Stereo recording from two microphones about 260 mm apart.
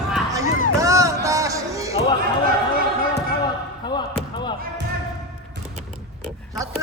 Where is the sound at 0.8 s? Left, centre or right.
Centre.